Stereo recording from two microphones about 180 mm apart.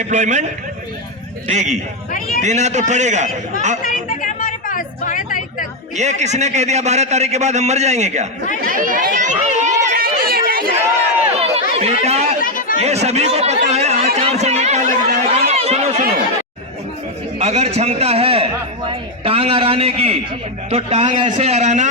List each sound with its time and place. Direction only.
0.1 s a man's voice: 40° right (ahead or behind)
1.5 s a man's voice: 40° right (ahead or behind)
3.8 s a sound: 50° left (ahead or behind)
6.0 s a man's voice: 40° right (ahead or behind)
9.9 s chatter: 55° right (ahead or behind)
10.8 s run: 15° right (ahead or behind)
11.8 s speech: 35° right (ahead or behind)
12.4 s chatter: 50° left (ahead or behind)
12.8 s a sound: 35° right (ahead or behind)
15.3 s run: 35° right (ahead or behind)
17.4 s a man's voice: 35° right (ahead or behind)